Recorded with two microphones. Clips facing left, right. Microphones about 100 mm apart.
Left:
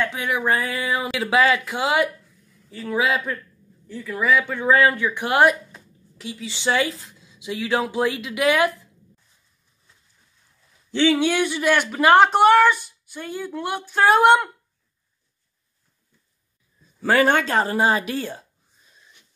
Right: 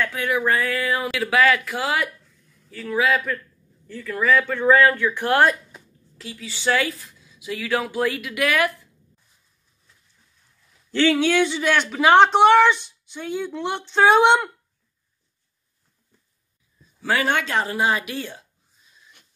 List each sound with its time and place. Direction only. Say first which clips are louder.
0.0 s speech: right 1 dB; 20° left (ahead or behind)
10.9 s a woman's voice: even; 15° left (ahead or behind)
17.0 s speech: left 4 dB; 45° left (ahead or behind)